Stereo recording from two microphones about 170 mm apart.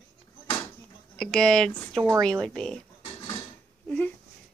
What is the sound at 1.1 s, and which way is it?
Speech, 5° left (ahead or behind).